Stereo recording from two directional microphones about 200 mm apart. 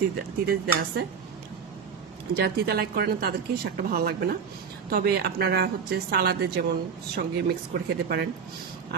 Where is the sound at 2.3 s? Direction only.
50° right (ahead or behind).